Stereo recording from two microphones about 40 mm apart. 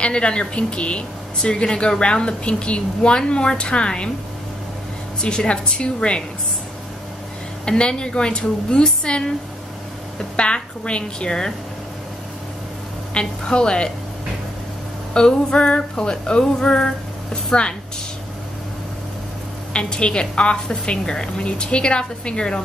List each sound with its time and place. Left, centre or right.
0.0 s speech: left
5.2 s speech: left
7.6 s speech: left
13.1 s speech: left
15.1 s speech: left
19.7 s speech: left